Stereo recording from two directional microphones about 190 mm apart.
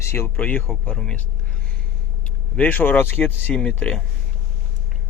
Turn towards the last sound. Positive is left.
turn(degrees=5)  # may be behind; listen again after turning